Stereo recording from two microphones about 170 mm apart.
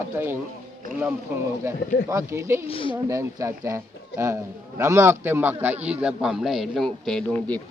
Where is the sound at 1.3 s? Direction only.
15° right (ahead or behind).